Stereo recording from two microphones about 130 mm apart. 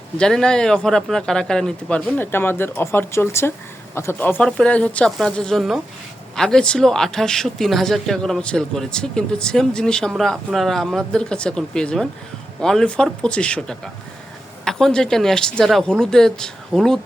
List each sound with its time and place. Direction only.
0.2 s speech: 5° left (ahead or behind)
2.1 s speech: 15° left (ahead or behind)